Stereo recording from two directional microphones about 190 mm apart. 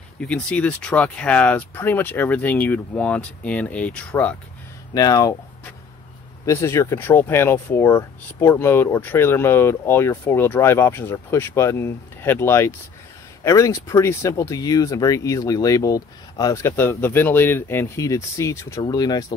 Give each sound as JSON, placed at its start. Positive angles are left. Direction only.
{"t": 0.2, "sound": "speech", "side_deg": 5}
{"t": 4.9, "sound": "speech", "side_deg": 20}
{"t": 6.4, "sound": "speech", "side_deg": 15}